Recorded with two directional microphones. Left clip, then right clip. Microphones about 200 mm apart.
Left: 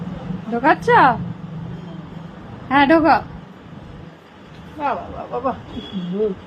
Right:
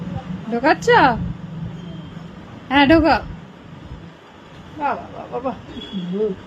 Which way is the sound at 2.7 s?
20° right (ahead or behind).